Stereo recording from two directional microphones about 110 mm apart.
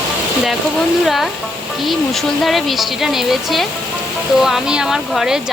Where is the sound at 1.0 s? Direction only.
Centre (ahead or behind).